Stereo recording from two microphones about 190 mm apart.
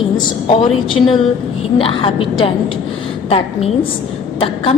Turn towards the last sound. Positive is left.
turn(degrees=30)  # may be behind; listen again after turning